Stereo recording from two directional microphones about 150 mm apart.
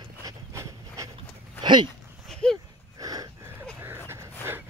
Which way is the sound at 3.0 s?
25° right (ahead or behind).